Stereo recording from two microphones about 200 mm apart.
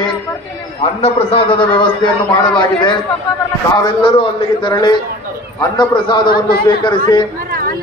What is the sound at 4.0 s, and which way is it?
A man's voice, 25° left (ahead or behind).